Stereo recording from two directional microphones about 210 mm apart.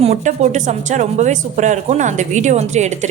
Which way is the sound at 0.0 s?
35° right (ahead or behind).